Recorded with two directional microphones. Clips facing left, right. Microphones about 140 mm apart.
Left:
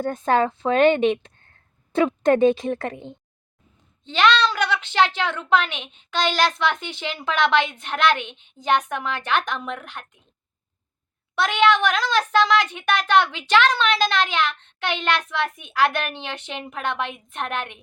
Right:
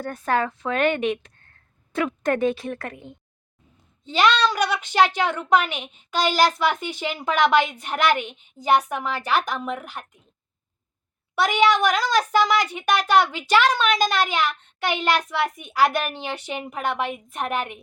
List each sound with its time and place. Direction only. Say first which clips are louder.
0.0 s a woman's voice: left 4 dB; 20° left (ahead or behind)
4.0 s a woman's voice: even; 10° right (ahead or behind)
11.3 s a woman's voice: even; 10° right (ahead or behind)